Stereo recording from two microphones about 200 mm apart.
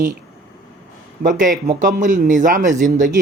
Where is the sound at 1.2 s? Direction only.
40° right (ahead or behind).